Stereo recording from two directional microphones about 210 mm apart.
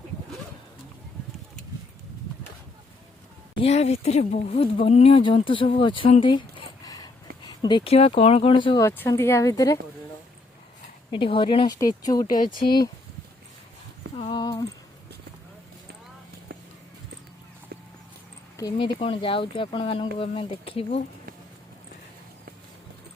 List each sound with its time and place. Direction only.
3.6 s speech: 30° left (ahead or behind)
8.9 s speech: 10° left (ahead or behind)
11.1 s speech: 25° left (ahead or behind)
12.4 s speech: 40° left (ahead or behind)
14.2 s a sound: 25° left (ahead or behind)
18.5 s a sound: 15° left (ahead or behind)
18.9 s speech: 25° left (ahead or behind)